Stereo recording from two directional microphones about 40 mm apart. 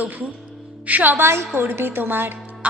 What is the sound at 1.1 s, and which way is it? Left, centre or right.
Speech, right.